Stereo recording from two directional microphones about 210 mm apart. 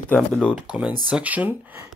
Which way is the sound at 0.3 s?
Centre (ahead or behind).